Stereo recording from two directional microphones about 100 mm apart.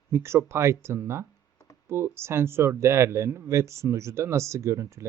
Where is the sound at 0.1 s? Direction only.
25° right (ahead or behind).